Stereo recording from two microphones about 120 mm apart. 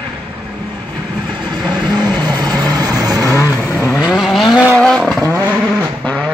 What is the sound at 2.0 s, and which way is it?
Vehicle, 15° left (ahead or behind).